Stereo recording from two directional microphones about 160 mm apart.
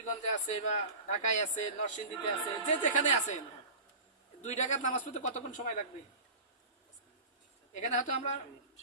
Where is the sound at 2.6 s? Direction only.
50° left (ahead or behind).